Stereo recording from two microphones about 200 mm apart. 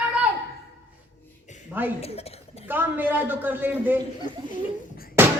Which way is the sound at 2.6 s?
10° right (ahead or behind).